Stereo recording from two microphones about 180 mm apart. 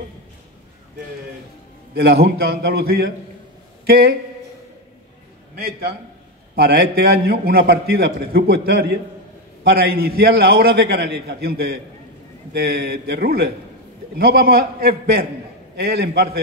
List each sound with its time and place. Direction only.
2.0 s a man's voice: 65° right (ahead or behind)
5.6 s a man's voice: 55° right (ahead or behind)